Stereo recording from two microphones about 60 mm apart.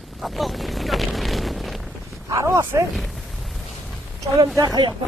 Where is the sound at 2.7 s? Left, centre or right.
Right.